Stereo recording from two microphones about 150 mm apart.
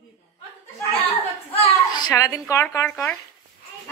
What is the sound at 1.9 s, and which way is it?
A woman's voice, 25° left (ahead or behind).